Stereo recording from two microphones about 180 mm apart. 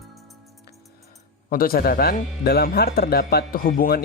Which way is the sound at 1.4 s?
55° left (ahead or behind).